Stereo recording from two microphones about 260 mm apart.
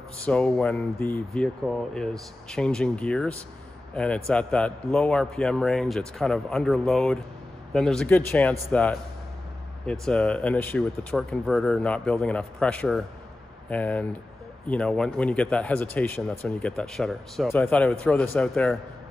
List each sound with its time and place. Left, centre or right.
0.2 s speech: centre